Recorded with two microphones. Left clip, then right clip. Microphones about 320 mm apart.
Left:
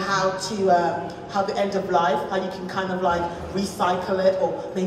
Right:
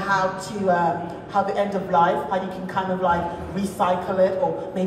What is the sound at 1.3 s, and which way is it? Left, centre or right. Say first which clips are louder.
A man's voice: right 1 dB; right.